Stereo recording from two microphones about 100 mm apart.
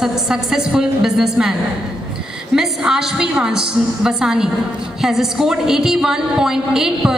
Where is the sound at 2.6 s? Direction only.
5° right (ahead or behind).